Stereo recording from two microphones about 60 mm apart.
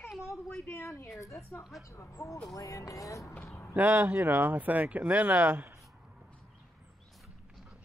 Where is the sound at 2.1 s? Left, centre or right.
Left.